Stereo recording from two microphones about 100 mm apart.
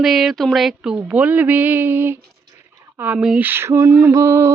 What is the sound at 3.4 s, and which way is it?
Female singing, 25° right (ahead or behind).